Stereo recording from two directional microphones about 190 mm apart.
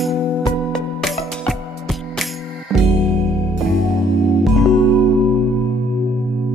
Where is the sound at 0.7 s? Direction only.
5° left (ahead or behind).